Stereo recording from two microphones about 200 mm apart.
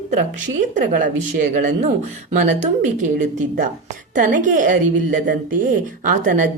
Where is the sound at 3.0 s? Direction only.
40° right (ahead or behind).